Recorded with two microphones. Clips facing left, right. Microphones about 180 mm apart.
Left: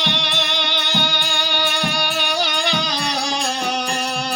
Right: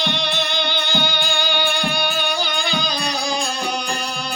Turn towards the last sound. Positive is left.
turn(degrees=75)  # may be behind; listen again after turning